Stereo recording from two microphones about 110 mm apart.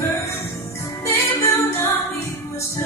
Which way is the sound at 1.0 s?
25° left (ahead or behind).